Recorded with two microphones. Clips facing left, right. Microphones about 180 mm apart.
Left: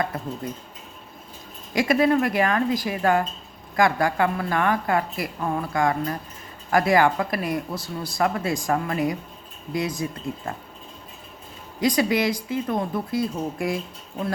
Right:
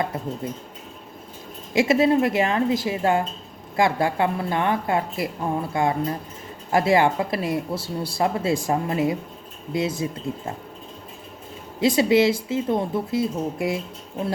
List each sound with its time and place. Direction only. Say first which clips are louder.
0.4 s speech: right 2 dB; 25° right (ahead or behind)
1.7 s speech: right 2 dB; 25° right (ahead or behind)
11.8 s speech: right 4 dB; 25° right (ahead or behind)